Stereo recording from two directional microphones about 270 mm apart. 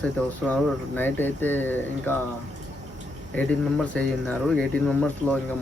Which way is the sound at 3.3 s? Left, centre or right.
Centre.